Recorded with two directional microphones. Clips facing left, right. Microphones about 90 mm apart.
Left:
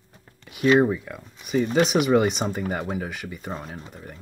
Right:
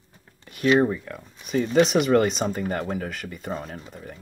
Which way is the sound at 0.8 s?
10° left (ahead or behind).